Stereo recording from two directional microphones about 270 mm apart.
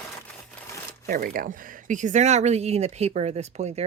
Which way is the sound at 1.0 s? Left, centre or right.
Right.